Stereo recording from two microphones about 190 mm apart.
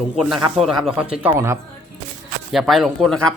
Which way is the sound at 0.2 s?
Centre (ahead or behind).